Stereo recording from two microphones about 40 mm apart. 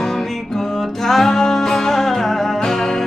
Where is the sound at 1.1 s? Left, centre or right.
Centre.